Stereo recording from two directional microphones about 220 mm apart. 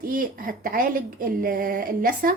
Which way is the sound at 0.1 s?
40° right (ahead or behind).